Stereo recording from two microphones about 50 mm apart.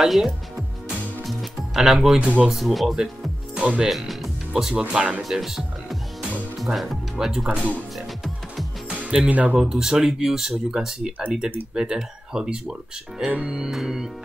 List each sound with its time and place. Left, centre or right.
0.0 s speech: centre
1.2 s music: centre
2.1 s speech: right
2.4 s speech: centre
3.5 s speech: right
3.8 s music: centre
4.6 s speech: centre
8.8 s music: centre
9.3 s speech: right
9.6 s speech: centre